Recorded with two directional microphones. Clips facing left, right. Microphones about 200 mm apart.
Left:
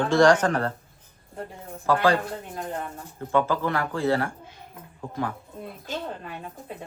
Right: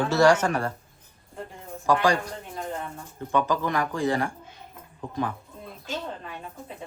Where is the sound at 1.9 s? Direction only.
15° right (ahead or behind).